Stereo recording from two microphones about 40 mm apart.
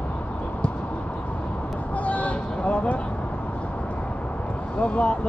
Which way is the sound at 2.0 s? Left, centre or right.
Left.